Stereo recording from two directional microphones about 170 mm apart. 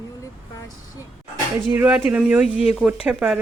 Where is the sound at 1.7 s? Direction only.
10° right (ahead or behind).